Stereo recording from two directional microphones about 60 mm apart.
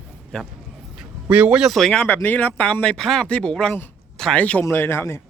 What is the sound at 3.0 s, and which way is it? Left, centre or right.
Speech, centre.